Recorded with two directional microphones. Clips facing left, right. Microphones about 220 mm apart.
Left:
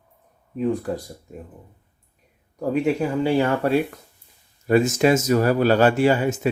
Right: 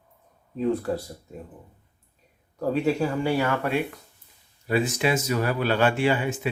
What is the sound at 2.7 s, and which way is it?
Speech, 15° left (ahead or behind).